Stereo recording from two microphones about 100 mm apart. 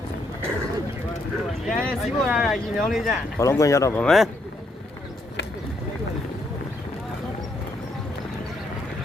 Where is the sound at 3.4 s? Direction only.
30° left (ahead or behind).